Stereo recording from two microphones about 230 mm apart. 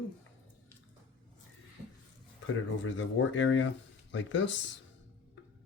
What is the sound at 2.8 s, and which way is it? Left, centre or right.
Speech, left.